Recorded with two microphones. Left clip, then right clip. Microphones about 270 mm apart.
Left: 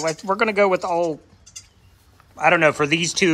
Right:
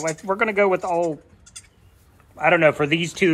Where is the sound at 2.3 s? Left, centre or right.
Centre.